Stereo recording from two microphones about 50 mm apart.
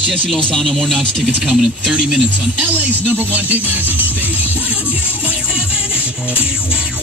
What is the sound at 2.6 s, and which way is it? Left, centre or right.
Speech, right.